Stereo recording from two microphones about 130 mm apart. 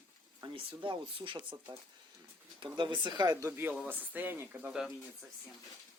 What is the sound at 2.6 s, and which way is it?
Speech, 35° right (ahead or behind).